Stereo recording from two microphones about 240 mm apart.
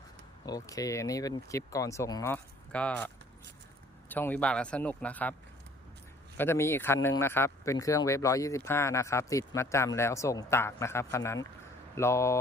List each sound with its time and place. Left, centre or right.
0.4 s speech: centre
4.1 s speech: centre
6.3 s speech: centre